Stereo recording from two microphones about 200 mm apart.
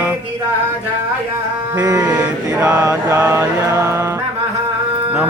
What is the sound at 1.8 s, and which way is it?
Mantra, 20° right (ahead or behind).